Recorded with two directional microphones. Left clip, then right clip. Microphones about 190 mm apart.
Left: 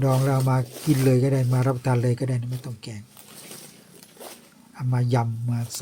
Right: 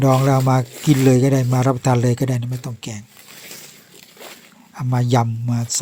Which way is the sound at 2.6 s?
45° right (ahead or behind).